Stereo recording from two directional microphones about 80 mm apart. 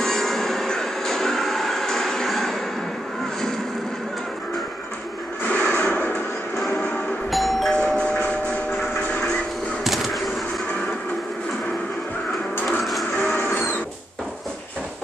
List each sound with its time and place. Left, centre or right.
0.0 s train: centre
5.4 s a sound: centre
7.2 s doorbell: centre
9.8 s bird: centre
12.5 s printer: left
13.3 s a sound: left